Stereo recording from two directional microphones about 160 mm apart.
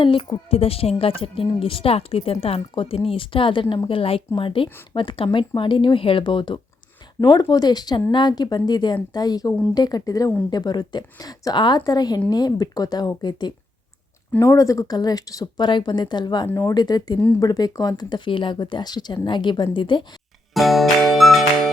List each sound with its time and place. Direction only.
0.0 s speech: 35° left (ahead or behind)
20.5 s music: centre (ahead or behind)